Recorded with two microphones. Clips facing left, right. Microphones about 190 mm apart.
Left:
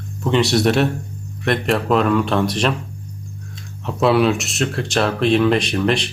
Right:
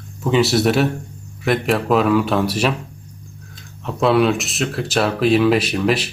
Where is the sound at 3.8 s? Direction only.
Centre (ahead or behind).